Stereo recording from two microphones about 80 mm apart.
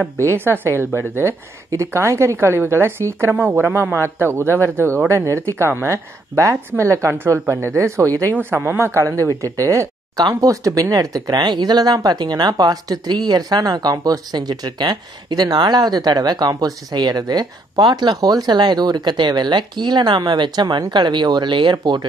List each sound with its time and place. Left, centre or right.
0.3 s a man's voice: right
1.9 s a woman's voice: right
3.3 s a man's voice: right
8.4 s a woman's voice: right